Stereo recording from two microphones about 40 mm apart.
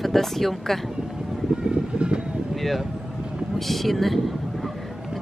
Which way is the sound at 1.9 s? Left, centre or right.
Right.